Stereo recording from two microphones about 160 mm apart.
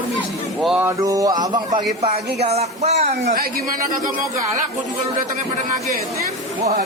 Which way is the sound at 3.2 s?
65° right (ahead or behind).